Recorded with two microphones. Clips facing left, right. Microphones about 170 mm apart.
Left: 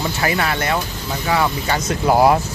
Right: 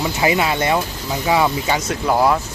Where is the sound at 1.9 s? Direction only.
10° left (ahead or behind).